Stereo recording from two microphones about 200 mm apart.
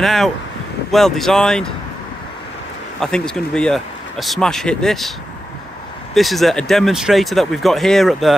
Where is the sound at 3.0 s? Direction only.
5° left (ahead or behind).